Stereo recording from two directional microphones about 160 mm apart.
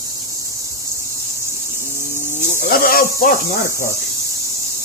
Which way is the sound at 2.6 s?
70° left (ahead or behind).